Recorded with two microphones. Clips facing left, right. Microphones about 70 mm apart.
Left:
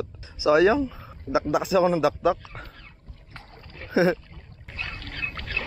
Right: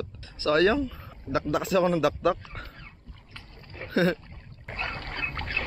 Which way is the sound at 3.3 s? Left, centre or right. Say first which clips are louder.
Left 4 dB; left.